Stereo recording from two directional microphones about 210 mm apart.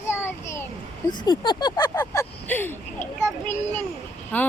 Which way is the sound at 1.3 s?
20° left (ahead or behind).